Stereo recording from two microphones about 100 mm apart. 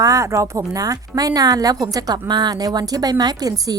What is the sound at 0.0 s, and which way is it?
Speech, 35° right (ahead or behind).